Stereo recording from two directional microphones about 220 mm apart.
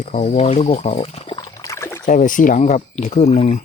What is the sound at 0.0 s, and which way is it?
Pour, 35° left (ahead or behind).